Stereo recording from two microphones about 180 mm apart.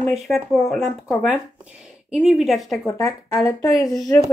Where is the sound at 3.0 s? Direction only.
15° left (ahead or behind).